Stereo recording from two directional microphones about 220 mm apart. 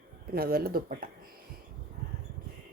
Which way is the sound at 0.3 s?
45° right (ahead or behind).